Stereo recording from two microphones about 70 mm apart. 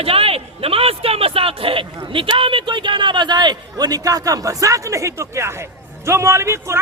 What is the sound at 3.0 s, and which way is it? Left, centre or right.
Speech, right.